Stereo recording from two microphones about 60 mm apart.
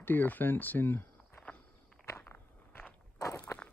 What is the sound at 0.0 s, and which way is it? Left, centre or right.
Speech, left.